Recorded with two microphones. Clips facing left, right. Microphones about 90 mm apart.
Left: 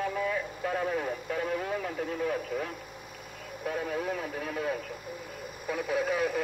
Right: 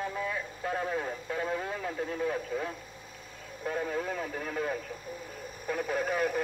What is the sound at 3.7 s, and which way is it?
Speech, 5° left (ahead or behind).